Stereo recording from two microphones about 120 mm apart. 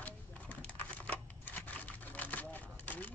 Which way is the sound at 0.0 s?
15° left (ahead or behind).